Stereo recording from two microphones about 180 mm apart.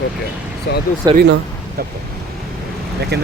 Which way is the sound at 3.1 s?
65° right (ahead or behind).